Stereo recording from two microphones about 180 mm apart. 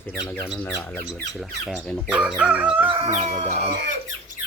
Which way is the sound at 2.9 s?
35° right (ahead or behind).